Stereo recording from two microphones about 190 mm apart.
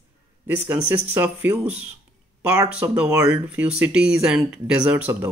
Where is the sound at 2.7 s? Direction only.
5° right (ahead or behind).